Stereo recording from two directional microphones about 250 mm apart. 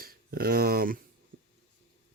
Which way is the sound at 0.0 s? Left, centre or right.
Right.